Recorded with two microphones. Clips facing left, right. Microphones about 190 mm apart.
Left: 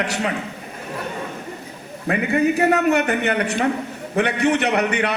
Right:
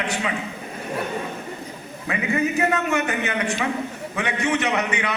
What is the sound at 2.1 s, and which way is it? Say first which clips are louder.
A man's voice: left 5 dB; 60° left (ahead or behind).